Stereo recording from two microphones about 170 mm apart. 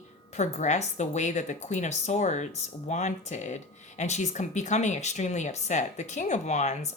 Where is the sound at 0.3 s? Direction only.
45° left (ahead or behind).